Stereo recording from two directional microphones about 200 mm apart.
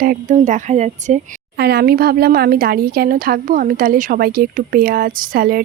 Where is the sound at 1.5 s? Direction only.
55° right (ahead or behind).